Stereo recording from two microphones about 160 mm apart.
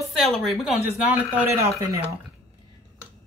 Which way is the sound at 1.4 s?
20° right (ahead or behind).